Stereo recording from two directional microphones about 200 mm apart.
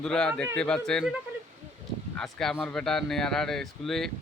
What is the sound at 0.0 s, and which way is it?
Speech, 5° left (ahead or behind).